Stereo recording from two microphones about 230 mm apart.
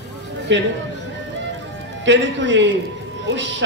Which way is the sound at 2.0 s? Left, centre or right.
Right.